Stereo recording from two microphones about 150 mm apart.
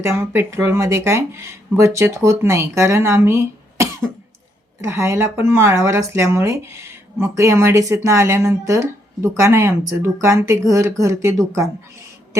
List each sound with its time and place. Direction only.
0.0 s speech: 20° right (ahead or behind)